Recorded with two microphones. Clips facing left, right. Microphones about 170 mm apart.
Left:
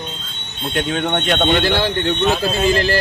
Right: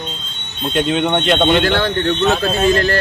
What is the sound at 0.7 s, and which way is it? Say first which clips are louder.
Speech: right 4 dB; centre (ahead or behind).